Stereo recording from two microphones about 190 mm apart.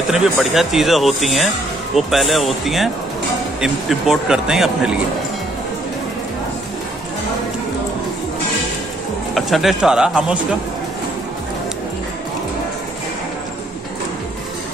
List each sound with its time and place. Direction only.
0.1 s speech: centre (ahead or behind)
9.3 s speech: centre (ahead or behind)